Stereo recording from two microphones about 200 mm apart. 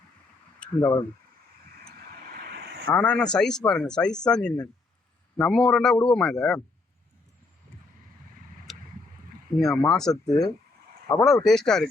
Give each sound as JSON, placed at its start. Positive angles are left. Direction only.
{"t": 0.6, "sound": "speech", "side_deg": 10}
{"t": 1.8, "sound": "vehicle", "side_deg": -50}
{"t": 2.9, "sound": "speech", "side_deg": 5}
{"t": 8.7, "sound": "vehicle", "side_deg": 0}
{"t": 9.6, "sound": "speech", "side_deg": 0}